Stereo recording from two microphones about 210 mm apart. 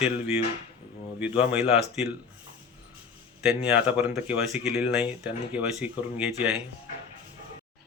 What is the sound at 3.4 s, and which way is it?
Speech, 5° right (ahead or behind).